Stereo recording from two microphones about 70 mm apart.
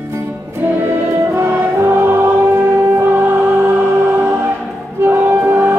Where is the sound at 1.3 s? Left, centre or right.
Right.